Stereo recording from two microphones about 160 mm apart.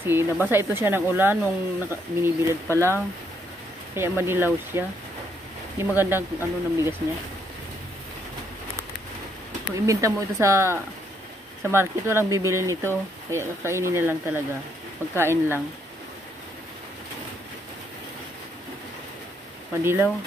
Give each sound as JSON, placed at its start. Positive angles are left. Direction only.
{"t": 0.0, "sound": "speech", "side_deg": -15}
{"t": 3.9, "sound": "speech", "side_deg": -15}
{"t": 9.8, "sound": "speech", "side_deg": -20}
{"t": 19.8, "sound": "speech", "side_deg": -15}